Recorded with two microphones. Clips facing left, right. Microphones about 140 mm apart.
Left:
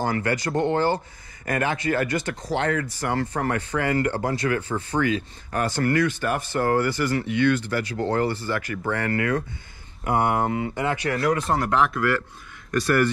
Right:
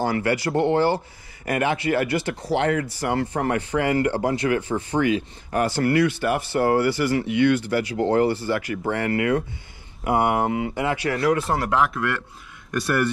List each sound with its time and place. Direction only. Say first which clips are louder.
0.1 s speech: right 2 dB; 25° right (ahead or behind)
11.1 s speech: right 2 dB; 5° right (ahead or behind)